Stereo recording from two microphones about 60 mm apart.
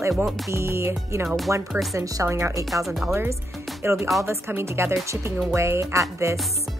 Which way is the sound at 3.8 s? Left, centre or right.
Right.